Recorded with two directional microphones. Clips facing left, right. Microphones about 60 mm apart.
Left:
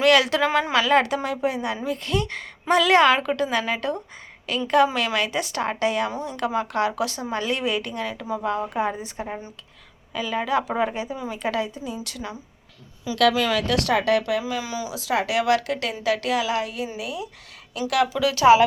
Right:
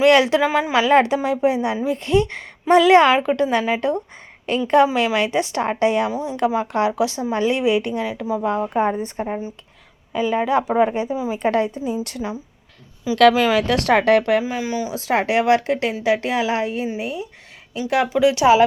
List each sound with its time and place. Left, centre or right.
0.0 s speech: right
0.3 s a woman's voice: centre
0.8 s a woman's voice: right
6.1 s a woman's voice: centre
6.3 s a woman's voice: centre
8.4 s a woman's voice: right
9.2 s a woman's voice: centre
11.4 s speech: right
12.2 s a woman's voice: centre
13.1 s speech: right
13.4 s a woman's voice: right